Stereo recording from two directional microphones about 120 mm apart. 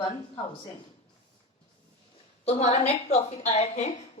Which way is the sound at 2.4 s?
65° left (ahead or behind).